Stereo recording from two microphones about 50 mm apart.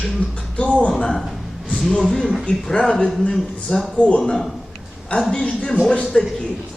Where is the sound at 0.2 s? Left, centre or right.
Left.